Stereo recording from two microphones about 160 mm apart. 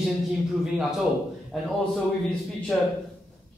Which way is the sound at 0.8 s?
Centre (ahead or behind).